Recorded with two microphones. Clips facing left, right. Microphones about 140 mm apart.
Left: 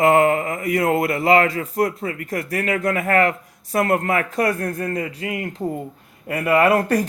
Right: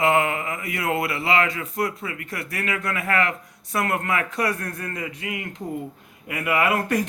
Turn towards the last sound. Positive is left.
turn(degrees=40)  # may be behind; listen again after turning